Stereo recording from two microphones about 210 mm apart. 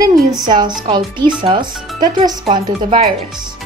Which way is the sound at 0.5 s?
20° right (ahead or behind).